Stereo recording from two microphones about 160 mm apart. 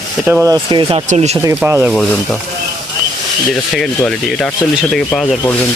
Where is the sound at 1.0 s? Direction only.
45° right (ahead or behind).